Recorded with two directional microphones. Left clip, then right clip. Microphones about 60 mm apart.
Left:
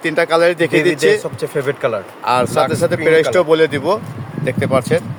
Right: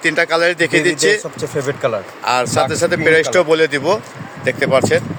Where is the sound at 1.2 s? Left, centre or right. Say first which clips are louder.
Left 1 dB; centre.